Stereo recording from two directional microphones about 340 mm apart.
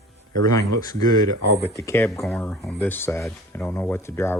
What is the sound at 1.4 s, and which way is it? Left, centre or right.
Speech, left.